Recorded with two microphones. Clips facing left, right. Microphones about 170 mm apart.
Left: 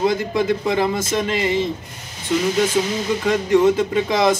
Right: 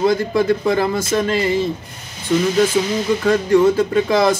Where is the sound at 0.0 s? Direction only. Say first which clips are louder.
Right 3 dB; 20° left (ahead or behind).